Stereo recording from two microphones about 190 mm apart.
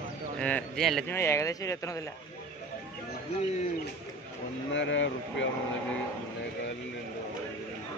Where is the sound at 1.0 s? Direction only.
15° left (ahead or behind).